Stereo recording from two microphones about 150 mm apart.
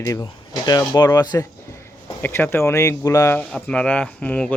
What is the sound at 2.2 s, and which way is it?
Speech, 15° left (ahead or behind).